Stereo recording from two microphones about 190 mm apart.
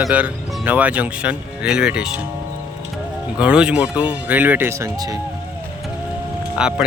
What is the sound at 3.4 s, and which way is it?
Speech, 5° right (ahead or behind).